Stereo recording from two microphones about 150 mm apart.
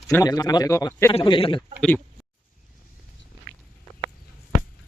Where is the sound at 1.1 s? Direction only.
40° left (ahead or behind).